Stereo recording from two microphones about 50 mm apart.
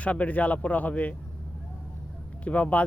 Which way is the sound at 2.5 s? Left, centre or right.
Left.